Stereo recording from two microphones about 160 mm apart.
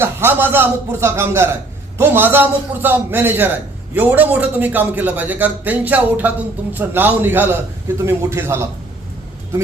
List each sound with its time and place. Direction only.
0.0 s a man's voice: 15° right (ahead or behind)